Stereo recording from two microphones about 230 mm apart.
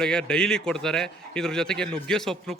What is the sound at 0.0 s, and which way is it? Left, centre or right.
A man's voice, centre.